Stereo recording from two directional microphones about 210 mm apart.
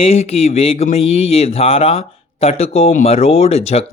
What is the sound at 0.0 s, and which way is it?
Speech, 30° left (ahead or behind).